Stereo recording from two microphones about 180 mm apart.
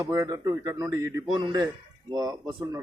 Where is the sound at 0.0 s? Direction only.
20° right (ahead or behind).